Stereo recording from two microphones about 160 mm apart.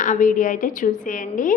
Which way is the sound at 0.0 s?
55° left (ahead or behind).